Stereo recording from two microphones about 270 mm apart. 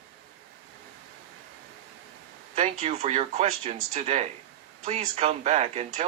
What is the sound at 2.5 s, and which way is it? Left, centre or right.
Speech, right.